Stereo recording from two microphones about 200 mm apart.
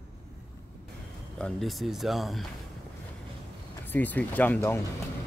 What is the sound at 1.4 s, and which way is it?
A man's voice, centre (ahead or behind).